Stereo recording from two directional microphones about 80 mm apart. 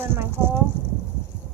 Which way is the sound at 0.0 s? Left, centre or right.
Right.